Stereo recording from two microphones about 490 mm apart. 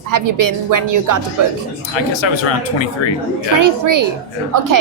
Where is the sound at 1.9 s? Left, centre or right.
Left.